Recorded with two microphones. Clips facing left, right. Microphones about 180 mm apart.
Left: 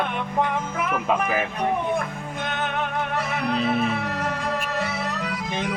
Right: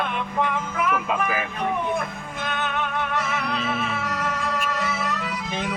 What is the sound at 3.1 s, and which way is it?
Music, 40° left (ahead or behind).